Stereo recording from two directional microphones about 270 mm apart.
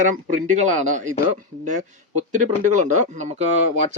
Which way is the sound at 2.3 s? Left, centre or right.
Right.